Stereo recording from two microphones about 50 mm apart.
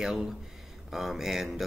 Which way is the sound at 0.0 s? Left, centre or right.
Centre.